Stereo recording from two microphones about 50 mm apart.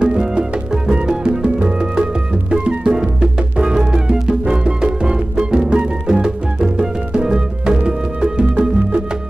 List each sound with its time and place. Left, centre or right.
0.0 s music: centre